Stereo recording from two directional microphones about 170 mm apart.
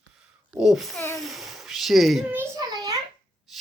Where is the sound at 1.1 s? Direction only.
Centre (ahead or behind).